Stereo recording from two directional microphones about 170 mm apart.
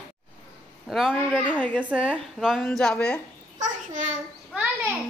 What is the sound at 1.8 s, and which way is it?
A woman's voice, 5° right (ahead or behind).